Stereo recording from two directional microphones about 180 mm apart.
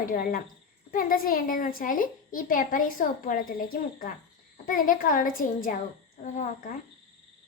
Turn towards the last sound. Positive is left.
turn(degrees=45)  # may be behind; listen again after turning